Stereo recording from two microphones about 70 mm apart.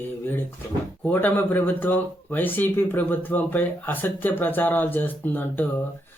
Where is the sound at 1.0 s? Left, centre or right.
Left.